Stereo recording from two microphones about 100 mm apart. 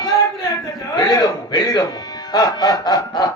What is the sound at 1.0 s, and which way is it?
Snicker, 40° left (ahead or behind).